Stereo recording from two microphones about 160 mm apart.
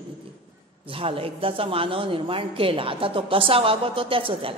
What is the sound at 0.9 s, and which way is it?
A woman's voice, 35° right (ahead or behind).